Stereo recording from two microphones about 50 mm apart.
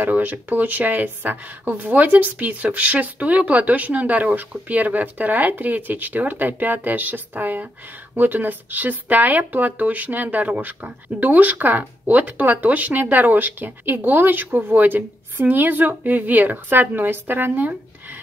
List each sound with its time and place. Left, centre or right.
0.0 s speech: right